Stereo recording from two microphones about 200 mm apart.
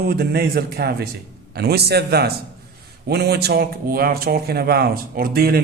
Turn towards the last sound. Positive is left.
turn(degrees=-50)  # may be behind; listen again after turning